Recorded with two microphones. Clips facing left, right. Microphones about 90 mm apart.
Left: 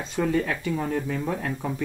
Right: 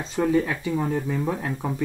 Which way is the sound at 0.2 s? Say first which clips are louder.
Right 3 dB; 10° right (ahead or behind).